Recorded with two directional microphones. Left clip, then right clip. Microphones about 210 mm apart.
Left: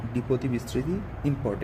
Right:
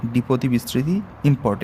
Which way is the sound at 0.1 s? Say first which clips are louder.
Right 6 dB; 50° right (ahead or behind).